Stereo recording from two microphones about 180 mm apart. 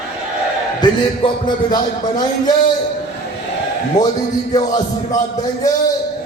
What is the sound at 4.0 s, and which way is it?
A man's voice, 20° left (ahead or behind).